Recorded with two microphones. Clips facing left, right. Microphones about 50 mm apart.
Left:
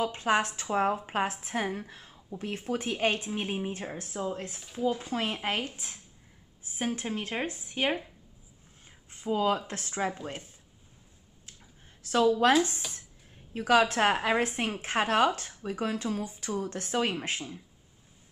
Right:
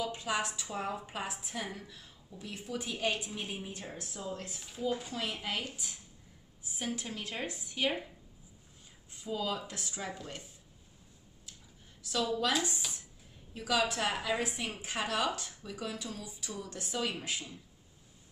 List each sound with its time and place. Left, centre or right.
0.0 s a woman's voice: left
5.1 s a woman's voice: left
9.1 s a woman's voice: left
12.0 s a woman's voice: left